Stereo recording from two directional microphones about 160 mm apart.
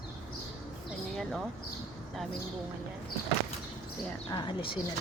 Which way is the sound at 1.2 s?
Centre (ahead or behind).